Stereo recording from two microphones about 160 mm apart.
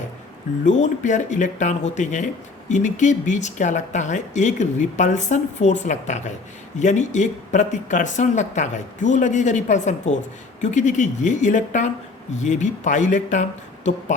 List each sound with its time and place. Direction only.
0.6 s speech: 50° left (ahead or behind)